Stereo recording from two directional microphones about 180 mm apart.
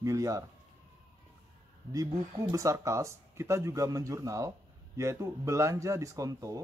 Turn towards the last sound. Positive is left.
turn(degrees=-20)  # may be behind; listen again after turning